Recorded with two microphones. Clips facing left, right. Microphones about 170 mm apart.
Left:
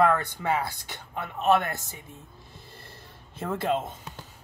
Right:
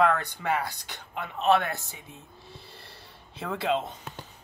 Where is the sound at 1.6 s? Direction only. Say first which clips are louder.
Even; 45° left (ahead or behind).